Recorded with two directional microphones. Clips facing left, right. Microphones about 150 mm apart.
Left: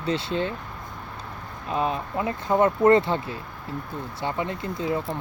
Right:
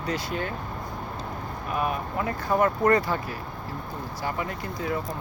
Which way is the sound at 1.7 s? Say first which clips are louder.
Left 2 dB; 25° left (ahead or behind).